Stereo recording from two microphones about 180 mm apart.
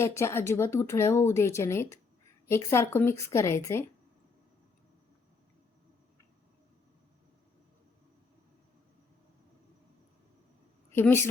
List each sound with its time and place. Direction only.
0.0 s speech: 15° left (ahead or behind)
10.9 s a woman's voice: 10° left (ahead or behind)